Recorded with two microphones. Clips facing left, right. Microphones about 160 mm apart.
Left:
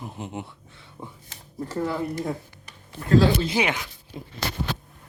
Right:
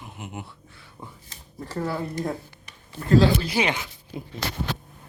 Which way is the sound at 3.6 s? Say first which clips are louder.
Right 1 dB; 15° left (ahead or behind).